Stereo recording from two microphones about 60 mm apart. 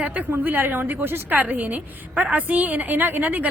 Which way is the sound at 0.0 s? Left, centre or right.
Right.